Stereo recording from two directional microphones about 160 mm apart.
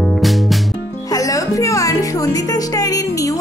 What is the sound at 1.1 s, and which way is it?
Speech, 20° left (ahead or behind).